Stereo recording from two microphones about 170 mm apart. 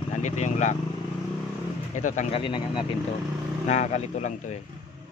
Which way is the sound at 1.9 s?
45° left (ahead or behind).